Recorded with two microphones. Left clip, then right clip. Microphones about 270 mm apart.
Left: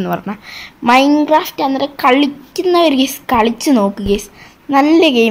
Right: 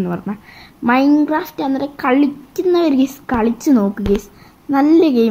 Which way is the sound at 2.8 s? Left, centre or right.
Left.